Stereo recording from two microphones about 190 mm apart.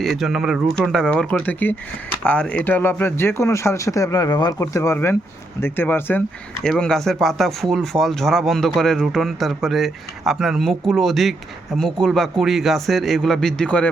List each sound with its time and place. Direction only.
0.0 s speech: centre (ahead or behind)